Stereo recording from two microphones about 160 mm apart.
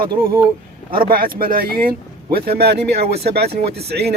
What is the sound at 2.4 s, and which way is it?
Speech, 85° right.